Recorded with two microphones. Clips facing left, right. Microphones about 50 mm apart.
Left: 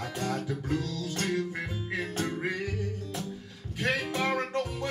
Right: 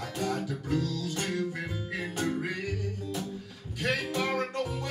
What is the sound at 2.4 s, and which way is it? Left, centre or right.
Music, centre.